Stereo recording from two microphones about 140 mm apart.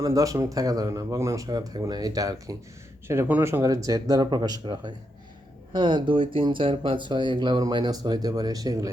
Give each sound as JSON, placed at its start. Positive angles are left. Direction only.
{"t": 0.0, "sound": "speech", "side_deg": -25}
{"t": 3.1, "sound": "speech", "side_deg": -15}